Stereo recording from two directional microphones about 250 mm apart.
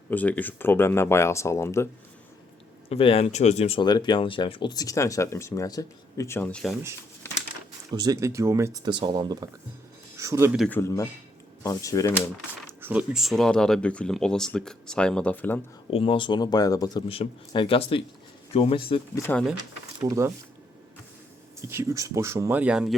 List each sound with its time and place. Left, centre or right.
0.1 s speech: centre
2.9 s speech: left; by 6.7 s centre
7.9 s speech: centre
10.7 s speech: centre
12.8 s speech: centre
15.9 s speech: left
19.3 s speech: centre
20.0 s speech: centre
21.6 s speech: centre